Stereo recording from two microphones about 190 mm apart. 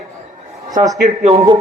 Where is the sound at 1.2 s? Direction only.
35° right (ahead or behind).